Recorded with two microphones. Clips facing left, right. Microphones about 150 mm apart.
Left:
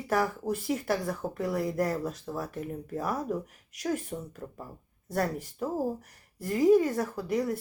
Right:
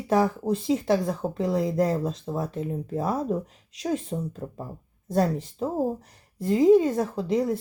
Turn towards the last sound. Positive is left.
turn(degrees=-20)  # may be behind; listen again after turning